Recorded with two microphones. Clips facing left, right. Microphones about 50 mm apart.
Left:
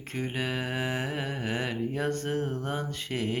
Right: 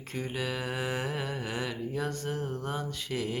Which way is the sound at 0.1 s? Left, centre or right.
Left.